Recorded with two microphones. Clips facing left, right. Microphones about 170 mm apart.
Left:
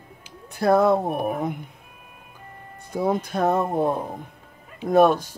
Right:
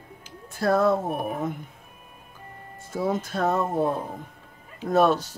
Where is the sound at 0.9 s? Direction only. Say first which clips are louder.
Left 3 dB; 55° left (ahead or behind).